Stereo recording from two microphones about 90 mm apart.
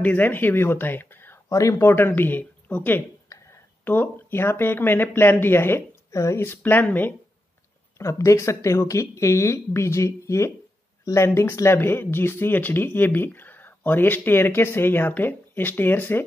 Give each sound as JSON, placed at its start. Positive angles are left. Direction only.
{"t": 0.0, "sound": "speech", "side_deg": 20}
{"t": 1.5, "sound": "speech", "side_deg": 35}
{"t": 3.3, "sound": "a sound", "side_deg": 35}
{"t": 3.8, "sound": "speech", "side_deg": 20}
{"t": 8.0, "sound": "speech", "side_deg": 35}